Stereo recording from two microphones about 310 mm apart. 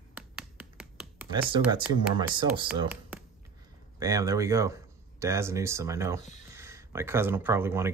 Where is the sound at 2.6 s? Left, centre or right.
Centre.